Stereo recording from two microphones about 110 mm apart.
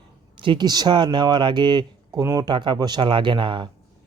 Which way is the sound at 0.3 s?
50° right (ahead or behind).